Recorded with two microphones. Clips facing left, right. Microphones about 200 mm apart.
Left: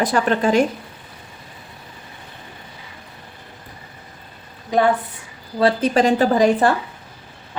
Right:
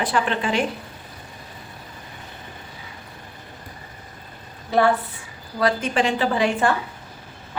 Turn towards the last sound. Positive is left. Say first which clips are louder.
# left 5 dB
turn(degrees=40)  # may be behind; listen again after turning